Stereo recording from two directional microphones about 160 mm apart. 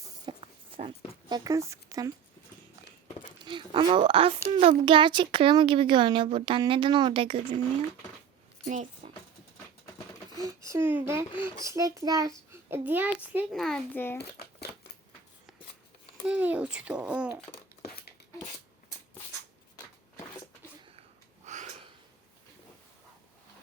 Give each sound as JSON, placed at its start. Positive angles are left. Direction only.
{"t": 0.3, "sound": "dog", "side_deg": -30}
{"t": 1.5, "sound": "a child's voice", "side_deg": -20}
{"t": 3.4, "sound": "speech", "side_deg": -30}
{"t": 8.6, "sound": "a sound", "side_deg": -50}
{"t": 10.3, "sound": "a child's voice", "side_deg": -20}
{"t": 13.5, "sound": "a child's voice", "side_deg": 0}
{"t": 14.2, "sound": "crumpling", "side_deg": 90}
{"t": 16.2, "sound": "speech", "side_deg": -10}
{"t": 17.8, "sound": "a sound", "side_deg": 75}
{"t": 21.4, "sound": "a sound", "side_deg": -50}